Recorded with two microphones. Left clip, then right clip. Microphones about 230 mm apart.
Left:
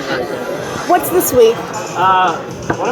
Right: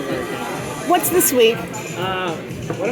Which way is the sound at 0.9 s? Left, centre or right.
Right.